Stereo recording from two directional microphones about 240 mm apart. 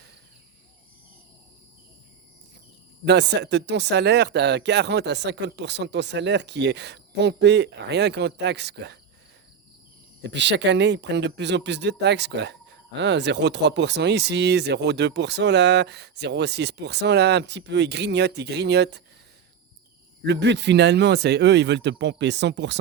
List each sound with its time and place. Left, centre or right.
3.0 s speech: right
10.2 s speech: right
20.2 s speech: right